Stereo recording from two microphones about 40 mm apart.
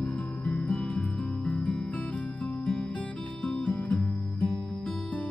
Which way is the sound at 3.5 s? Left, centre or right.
Left.